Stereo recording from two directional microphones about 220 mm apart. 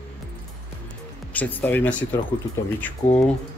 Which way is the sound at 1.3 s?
10° left (ahead or behind).